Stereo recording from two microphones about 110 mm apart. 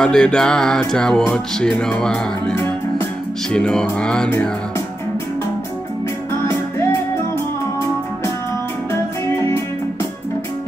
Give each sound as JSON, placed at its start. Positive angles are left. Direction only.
{"t": 0.0, "sound": "music", "side_deg": 5}
{"t": 2.5, "sound": "music", "side_deg": 20}
{"t": 3.5, "sound": "music", "side_deg": 5}